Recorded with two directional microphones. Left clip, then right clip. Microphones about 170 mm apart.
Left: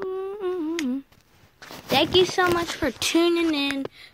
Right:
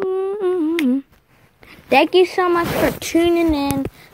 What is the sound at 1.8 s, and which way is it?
Speech, 30° right (ahead or behind).